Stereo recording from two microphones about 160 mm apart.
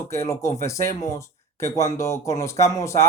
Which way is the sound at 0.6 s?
20° left (ahead or behind).